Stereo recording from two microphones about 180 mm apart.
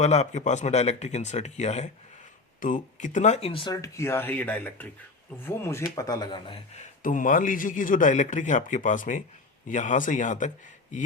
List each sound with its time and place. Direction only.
0.0 s speech: 40° left (ahead or behind)
7.0 s a man's voice: 45° left (ahead or behind)